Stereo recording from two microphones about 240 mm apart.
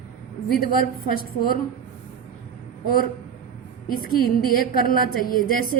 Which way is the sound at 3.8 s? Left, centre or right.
Left.